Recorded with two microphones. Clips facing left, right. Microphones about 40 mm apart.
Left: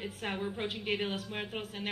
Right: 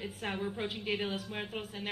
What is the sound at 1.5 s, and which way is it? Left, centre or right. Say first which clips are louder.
Speech: left 1 dB; centre.